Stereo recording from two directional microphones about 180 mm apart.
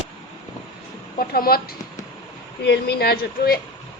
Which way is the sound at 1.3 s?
60° left (ahead or behind).